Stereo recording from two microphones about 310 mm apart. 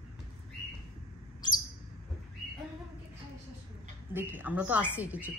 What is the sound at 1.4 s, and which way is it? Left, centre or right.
Bird, centre.